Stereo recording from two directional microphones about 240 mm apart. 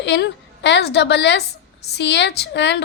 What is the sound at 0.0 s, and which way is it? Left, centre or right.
A woman's voice, left.